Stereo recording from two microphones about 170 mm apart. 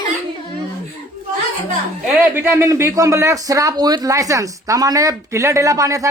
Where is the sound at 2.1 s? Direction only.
10° right (ahead or behind).